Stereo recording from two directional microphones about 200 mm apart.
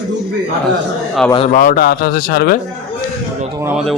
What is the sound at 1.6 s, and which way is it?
Speech, 45° left (ahead or behind).